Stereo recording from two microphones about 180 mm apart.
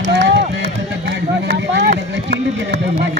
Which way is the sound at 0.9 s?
70° right (ahead or behind).